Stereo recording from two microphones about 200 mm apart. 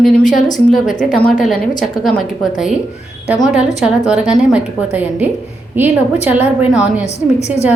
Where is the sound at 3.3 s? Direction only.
5° right (ahead or behind).